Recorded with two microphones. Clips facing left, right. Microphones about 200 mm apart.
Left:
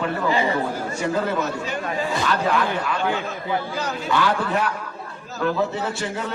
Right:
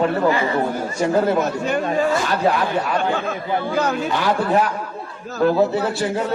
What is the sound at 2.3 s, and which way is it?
Speech, 40° right (ahead or behind).